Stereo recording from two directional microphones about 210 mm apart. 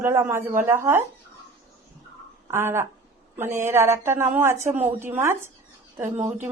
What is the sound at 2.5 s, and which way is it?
A woman's voice, 10° right (ahead or behind).